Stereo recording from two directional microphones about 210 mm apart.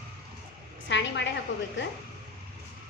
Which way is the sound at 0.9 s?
55° left (ahead or behind).